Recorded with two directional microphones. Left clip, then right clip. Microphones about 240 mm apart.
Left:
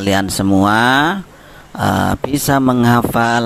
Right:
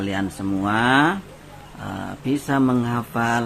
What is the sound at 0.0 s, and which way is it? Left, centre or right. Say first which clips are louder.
Speech: left 10 dB; left.